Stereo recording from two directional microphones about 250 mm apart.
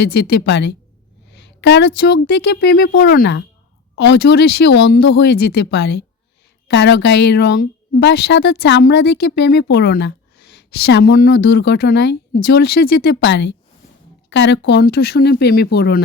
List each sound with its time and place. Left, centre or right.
0.0 s a woman's voice: left
1.3 s a sound: left
2.0 s a woman's voice: left